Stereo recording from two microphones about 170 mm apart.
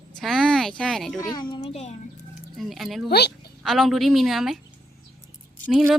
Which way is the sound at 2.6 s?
Centre (ahead or behind).